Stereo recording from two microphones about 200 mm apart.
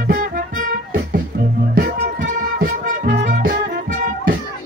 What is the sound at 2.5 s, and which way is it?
Music, 45° right (ahead or behind).